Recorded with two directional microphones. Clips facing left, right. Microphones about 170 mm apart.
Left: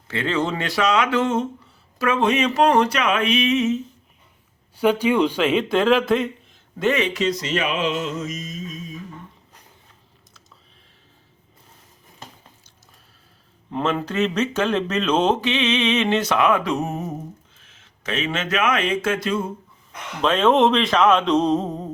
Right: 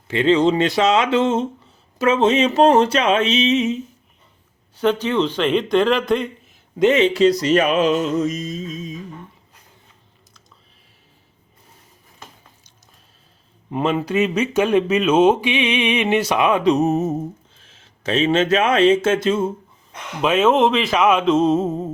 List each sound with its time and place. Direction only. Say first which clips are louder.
0.1 s speech: right 8 dB; 20° right (ahead or behind)
4.8 s speech: left 1 dB; 10° left (ahead or behind)
6.7 s a sound: right 6 dB; 20° right (ahead or behind)
13.7 s speech: right 3 dB; 15° right (ahead or behind)
20.2 s speech: right 1 dB; 5° right (ahead or behind)